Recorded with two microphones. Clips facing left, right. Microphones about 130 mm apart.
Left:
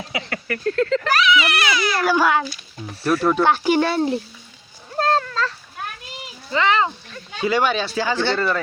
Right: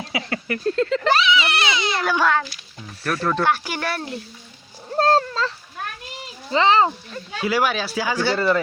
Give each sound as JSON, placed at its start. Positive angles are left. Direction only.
{"t": 0.3, "sound": "speech", "side_deg": -25}
{"t": 2.0, "sound": "a child's voice", "side_deg": 5}
{"t": 3.4, "sound": "a child's voice", "side_deg": 25}
{"t": 4.9, "sound": "cat", "side_deg": -35}
{"t": 6.5, "sound": "speech", "side_deg": -30}
{"t": 7.3, "sound": "speech", "side_deg": -5}